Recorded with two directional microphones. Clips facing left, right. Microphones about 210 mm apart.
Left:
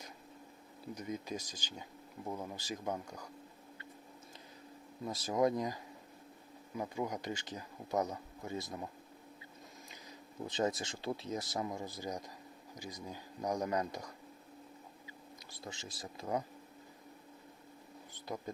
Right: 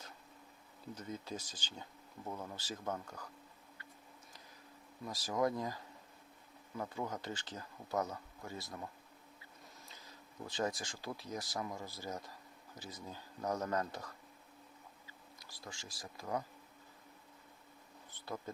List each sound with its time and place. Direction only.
0.9 s speech: 10° left (ahead or behind)
5.0 s speech: 20° left (ahead or behind)
10.4 s speech: 20° left (ahead or behind)
18.5 s speech: 15° left (ahead or behind)